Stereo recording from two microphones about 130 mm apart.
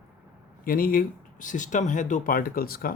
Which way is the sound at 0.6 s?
90° left.